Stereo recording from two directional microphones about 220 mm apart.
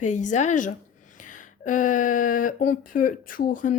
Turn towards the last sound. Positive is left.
turn(degrees=35)  # may be behind; listen again after turning